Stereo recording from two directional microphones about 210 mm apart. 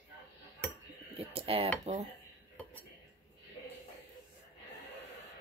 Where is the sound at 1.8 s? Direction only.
30° right (ahead or behind).